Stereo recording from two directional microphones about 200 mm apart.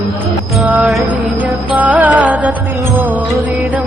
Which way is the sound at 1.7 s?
10° right (ahead or behind).